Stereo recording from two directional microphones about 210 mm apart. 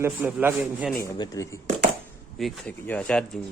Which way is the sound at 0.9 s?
20° left (ahead or behind).